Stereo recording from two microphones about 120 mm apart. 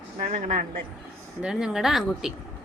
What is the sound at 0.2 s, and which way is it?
Speech, 90° right.